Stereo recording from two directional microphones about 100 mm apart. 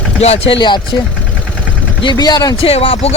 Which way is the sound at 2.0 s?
45° left (ahead or behind).